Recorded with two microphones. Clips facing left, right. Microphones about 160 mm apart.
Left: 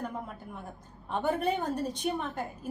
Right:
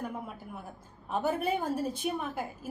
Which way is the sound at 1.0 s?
5° right (ahead or behind).